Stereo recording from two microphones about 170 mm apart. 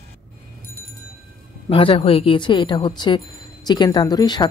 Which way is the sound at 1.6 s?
30° left (ahead or behind).